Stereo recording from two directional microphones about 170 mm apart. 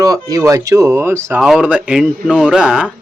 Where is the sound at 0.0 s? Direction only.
20° right (ahead or behind).